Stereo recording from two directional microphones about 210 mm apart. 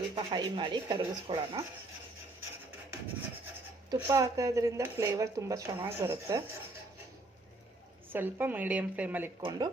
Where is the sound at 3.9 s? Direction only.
15° right (ahead or behind).